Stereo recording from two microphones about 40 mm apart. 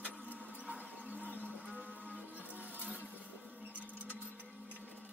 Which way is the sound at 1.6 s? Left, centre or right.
Right.